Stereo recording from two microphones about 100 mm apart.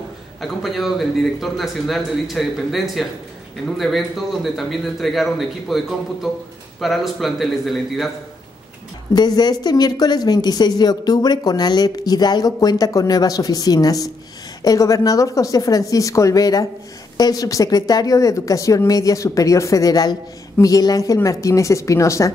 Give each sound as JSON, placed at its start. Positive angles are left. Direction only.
{"t": 0.4, "sound": "a man's voice", "side_deg": 0}
{"t": 9.1, "sound": "a woman's voice", "side_deg": 45}